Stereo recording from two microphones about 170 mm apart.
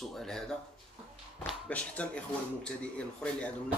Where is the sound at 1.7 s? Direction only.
10° left (ahead or behind).